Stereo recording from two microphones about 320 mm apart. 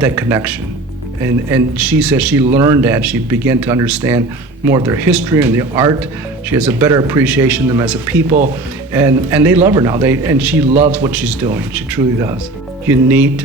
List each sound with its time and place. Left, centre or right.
0.0 s a man's voice: centre
10.7 s a man's voice: right
10.9 s a man's voice: centre